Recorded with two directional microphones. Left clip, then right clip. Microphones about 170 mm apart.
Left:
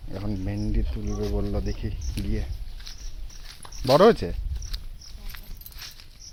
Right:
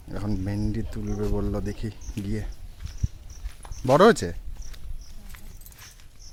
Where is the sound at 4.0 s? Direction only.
20° right (ahead or behind).